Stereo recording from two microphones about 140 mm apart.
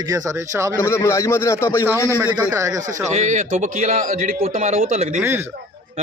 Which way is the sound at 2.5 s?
20° right (ahead or behind).